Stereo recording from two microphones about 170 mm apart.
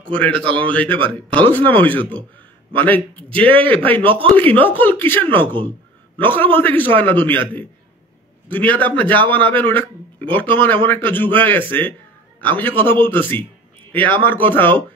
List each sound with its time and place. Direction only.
0.0 s a man's voice: 5° left (ahead or behind)
4.1 s speech: 30° right (ahead or behind)
4.4 s a man's voice: 10° left (ahead or behind)